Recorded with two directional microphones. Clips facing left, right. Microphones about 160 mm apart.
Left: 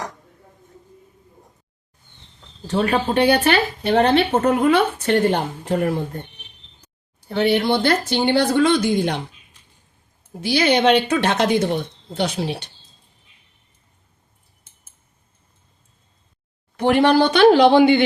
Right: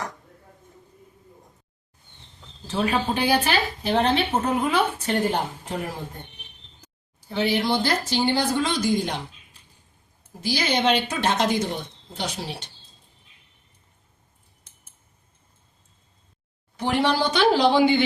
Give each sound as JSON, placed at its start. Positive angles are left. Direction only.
{"t": 2.6, "sound": "speech", "side_deg": 65}
{"t": 7.2, "sound": "speech", "side_deg": 60}
{"t": 10.4, "sound": "speech", "side_deg": 65}
{"t": 16.7, "sound": "speech", "side_deg": 60}